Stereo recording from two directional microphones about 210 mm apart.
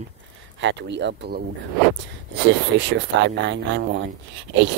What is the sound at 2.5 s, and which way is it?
Speech, 60° right (ahead or behind).